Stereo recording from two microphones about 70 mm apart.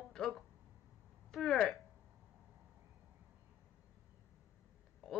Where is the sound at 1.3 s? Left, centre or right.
Centre.